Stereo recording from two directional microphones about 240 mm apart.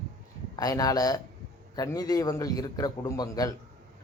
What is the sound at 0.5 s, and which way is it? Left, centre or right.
Speech, centre.